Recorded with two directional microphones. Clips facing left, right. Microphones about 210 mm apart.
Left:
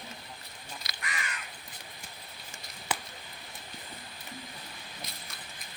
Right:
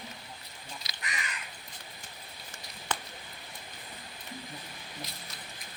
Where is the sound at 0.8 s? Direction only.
55° left (ahead or behind).